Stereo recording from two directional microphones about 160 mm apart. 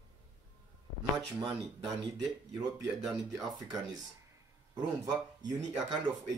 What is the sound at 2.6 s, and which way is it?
Speech, centre (ahead or behind).